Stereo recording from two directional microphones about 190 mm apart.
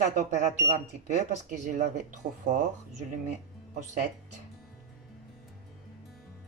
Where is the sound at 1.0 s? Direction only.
40° right (ahead or behind).